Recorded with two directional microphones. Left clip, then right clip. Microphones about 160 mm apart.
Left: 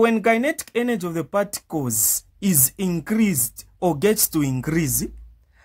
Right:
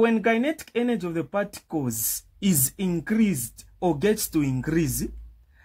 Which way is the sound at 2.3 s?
20° left (ahead or behind).